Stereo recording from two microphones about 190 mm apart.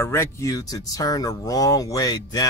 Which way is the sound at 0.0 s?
15° left (ahead or behind).